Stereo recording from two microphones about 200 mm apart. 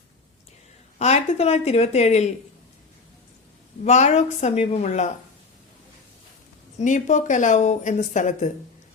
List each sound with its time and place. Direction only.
0.9 s speech: 35° left (ahead or behind)
3.8 s speech: 35° left (ahead or behind)
6.7 s speech: 40° left (ahead or behind)